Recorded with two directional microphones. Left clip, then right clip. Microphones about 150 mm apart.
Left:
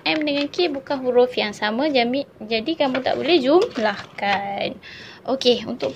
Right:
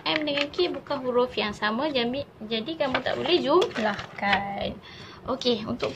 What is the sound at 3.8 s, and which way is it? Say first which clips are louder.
Speech: left 5 dB; 85° left.